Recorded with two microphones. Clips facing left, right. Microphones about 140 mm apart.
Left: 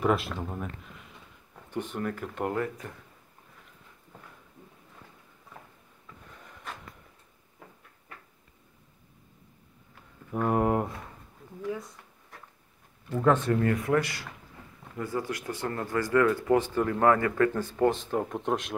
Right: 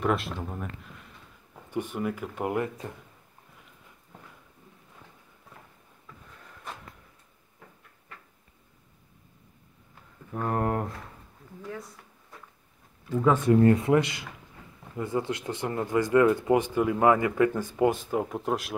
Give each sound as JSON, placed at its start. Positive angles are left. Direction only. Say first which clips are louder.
{"t": 0.0, "sound": "speech", "louder": "left 1 dB", "side_deg": 0}
{"t": 1.7, "sound": "speech", "louder": "right 2 dB", "side_deg": -10}
{"t": 2.8, "sound": "speech", "louder": "right 3 dB", "side_deg": -20}
{"t": 10.3, "sound": "speech", "louder": "left 3 dB", "side_deg": 10}
{"t": 13.1, "sound": "speech", "louder": "even", "side_deg": -5}
{"t": 13.6, "sound": "speech", "louder": "right 5 dB", "side_deg": -25}